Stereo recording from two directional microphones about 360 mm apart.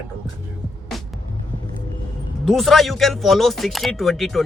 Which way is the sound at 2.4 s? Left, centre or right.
Centre.